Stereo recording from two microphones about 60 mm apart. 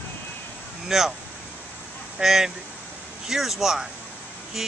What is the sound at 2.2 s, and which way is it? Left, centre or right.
Speech, centre.